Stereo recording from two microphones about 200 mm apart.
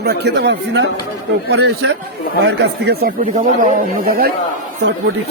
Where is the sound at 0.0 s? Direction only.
55° right (ahead or behind).